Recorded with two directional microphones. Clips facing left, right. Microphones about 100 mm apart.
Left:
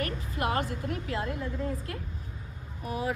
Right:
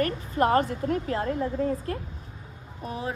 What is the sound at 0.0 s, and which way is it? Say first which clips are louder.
A woman's voice: right 7 dB; 40° right (ahead or behind).